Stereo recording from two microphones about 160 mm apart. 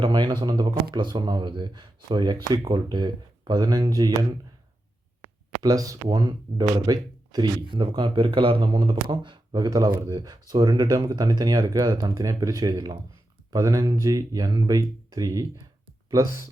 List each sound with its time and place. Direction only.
0.0 s speech: 30° right (ahead or behind)
5.6 s speech: 20° right (ahead or behind)